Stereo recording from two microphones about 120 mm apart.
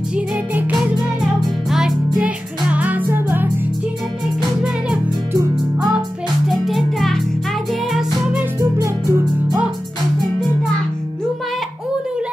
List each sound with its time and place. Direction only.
0.1 s music: 15° right (ahead or behind)
6.5 s music: centre (ahead or behind)
7.9 s music: 10° right (ahead or behind)
8.5 s music: 25° right (ahead or behind)